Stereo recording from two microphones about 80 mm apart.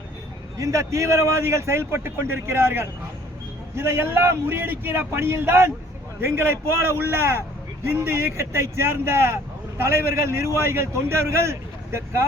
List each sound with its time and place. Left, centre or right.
0.5 s a man's voice: right